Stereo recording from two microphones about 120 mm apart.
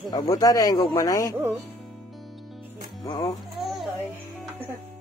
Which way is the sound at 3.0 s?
35° left (ahead or behind).